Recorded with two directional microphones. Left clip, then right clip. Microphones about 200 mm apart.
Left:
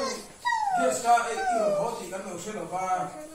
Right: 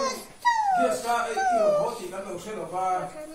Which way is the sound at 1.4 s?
30° right (ahead or behind).